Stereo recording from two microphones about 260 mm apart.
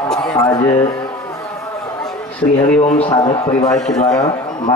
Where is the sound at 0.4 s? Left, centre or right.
Centre.